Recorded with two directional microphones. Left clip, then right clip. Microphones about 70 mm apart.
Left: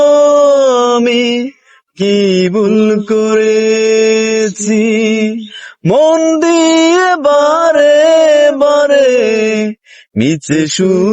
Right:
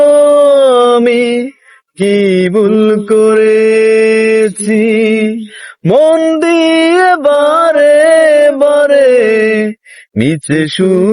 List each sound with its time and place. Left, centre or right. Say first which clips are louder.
0.0 s howl: right 1 dB; right
2.0 s speech: right 1 dB; right
2.5 s mantra: right 2 dB; right
5.9 s a sound: right 1 dB; right
6.1 s mantra: even; right
10.2 s speech: even; right